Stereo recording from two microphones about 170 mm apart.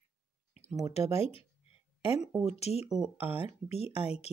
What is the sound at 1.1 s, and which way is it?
Speech, 35° left (ahead or behind).